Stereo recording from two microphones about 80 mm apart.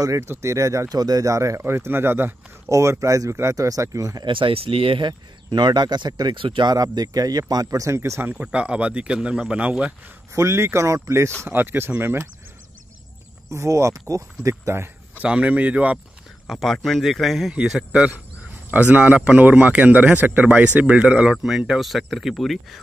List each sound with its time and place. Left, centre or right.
0.0 s speech: right
1.6 s speech: right
2.7 s speech: right
4.2 s speech: right
6.7 s speech: right
8.4 s speech: centre
10.3 s speech: right
13.5 s speech: right
15.1 s speech: centre
16.4 s speech: centre